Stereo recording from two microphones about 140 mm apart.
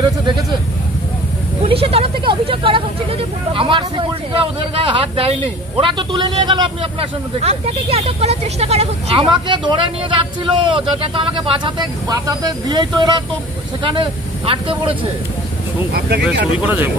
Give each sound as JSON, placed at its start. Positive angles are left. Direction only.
{"t": 1.7, "sound": "vehicle", "side_deg": -45}
{"t": 5.8, "sound": "a man's voice", "side_deg": -35}
{"t": 16.6, "sound": "speech", "side_deg": -15}